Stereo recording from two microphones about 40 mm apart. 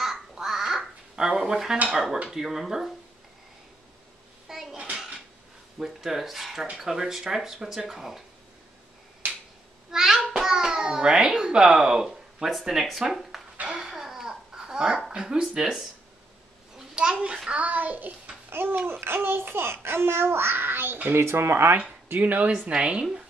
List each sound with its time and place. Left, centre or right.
0.0 s a sound: centre
2.3 s speech: centre
4.5 s a sound: centre
5.8 s speech: centre
9.8 s a child's voice: centre
12.5 s speech: centre
13.7 s babbling: centre
15.1 s a woman's voice: centre
16.7 s a sound: centre
17.6 s a child's voice: right
18.5 s a child's voice: right
21.1 s speech: right
22.1 s a child's voice: right
22.5 s a woman's voice: right